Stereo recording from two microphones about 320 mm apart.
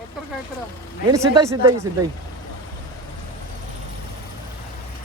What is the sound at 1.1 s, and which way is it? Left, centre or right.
Speech, centre.